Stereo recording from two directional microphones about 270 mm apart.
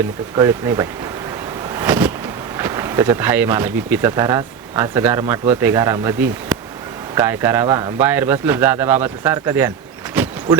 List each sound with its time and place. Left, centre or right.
0.3 s speech: centre
1.7 s vehicle: centre
2.6 s speech: centre